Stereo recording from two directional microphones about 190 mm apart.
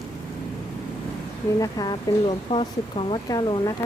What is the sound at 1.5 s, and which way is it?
Speech, 20° left (ahead or behind).